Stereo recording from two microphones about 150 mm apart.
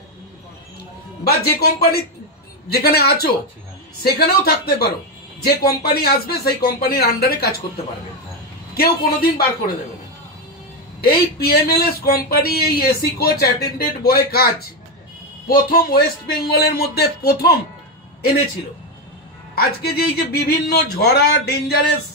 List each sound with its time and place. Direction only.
1.2 s a man's voice: 90° left
8.7 s a man's voice: 90° left
11.0 s a man's voice: 90° left
19.5 s a man's voice: 90° left